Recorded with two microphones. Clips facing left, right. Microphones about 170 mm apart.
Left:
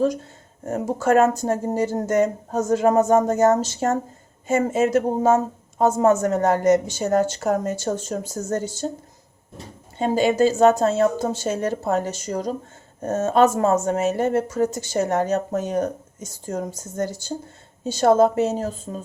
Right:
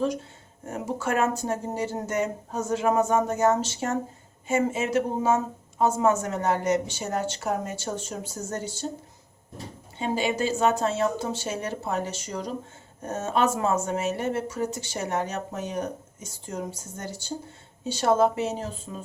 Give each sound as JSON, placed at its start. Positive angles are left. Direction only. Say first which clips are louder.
{"t": 0.6, "sound": "speech", "louder": "left 7 dB", "side_deg": 40}
{"t": 10.0, "sound": "speech", "louder": "left 8 dB", "side_deg": 45}